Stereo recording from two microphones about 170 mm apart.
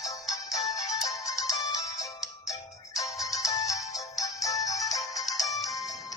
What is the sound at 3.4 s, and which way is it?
Music, 20° left (ahead or behind).